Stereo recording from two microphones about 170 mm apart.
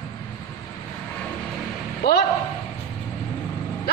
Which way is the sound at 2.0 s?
65° left (ahead or behind).